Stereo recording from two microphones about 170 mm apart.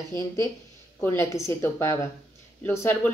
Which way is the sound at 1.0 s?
15° left (ahead or behind).